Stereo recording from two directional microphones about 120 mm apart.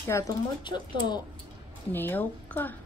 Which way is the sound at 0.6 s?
40° left (ahead or behind).